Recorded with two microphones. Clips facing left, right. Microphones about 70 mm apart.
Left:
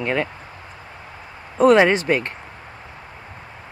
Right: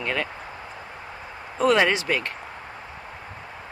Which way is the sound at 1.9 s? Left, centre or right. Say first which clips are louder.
Left 5 dB; left.